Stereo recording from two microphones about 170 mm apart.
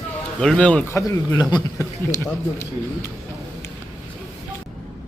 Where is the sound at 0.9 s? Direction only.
20° left (ahead or behind).